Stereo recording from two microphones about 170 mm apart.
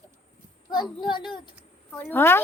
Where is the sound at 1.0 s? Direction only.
25° left (ahead or behind).